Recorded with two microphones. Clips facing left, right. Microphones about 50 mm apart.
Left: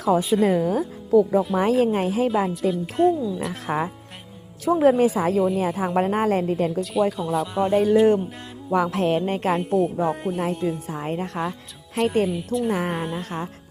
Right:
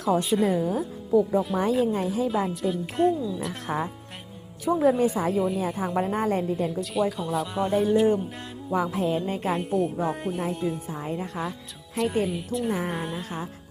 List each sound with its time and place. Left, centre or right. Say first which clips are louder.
0.0 s speech: left 3 dB; centre
0.5 s a woman's voice: left 4 dB; left
1.4 s speech: left 4 dB; centre
1.8 s a woman's voice: left 4 dB; left
2.3 s speech: left 4 dB; centre
3.7 s speech: left 4 dB; left
4.6 s a woman's voice: left 4 dB; left
5.8 s a woman's voice: left 4 dB; left
6.7 s speech: left 4 dB; centre
7.7 s a woman's voice: left 4 dB; left
8.7 s music: left 4 dB; left
9.6 s speech: left 4 dB; centre
11.0 s speech: left 4 dB; left
12.0 s speech: left 4 dB; centre